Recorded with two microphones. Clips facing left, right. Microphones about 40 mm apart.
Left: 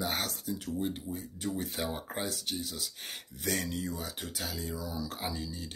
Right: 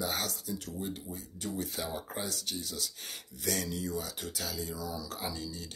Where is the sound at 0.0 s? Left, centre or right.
Left.